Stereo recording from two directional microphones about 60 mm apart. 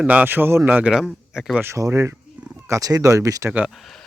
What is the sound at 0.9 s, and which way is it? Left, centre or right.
Speech, centre.